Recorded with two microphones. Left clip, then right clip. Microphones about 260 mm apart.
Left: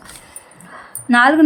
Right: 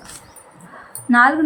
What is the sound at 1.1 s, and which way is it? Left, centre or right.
Speech, left.